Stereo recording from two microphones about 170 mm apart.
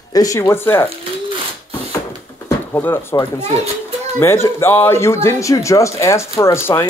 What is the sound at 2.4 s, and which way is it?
Speech, 15° left (ahead or behind).